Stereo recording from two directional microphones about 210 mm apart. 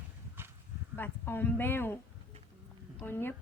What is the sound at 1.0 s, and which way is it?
Speech, 10° left (ahead or behind).